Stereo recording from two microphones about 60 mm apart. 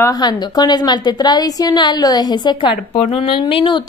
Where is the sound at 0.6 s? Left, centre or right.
Left.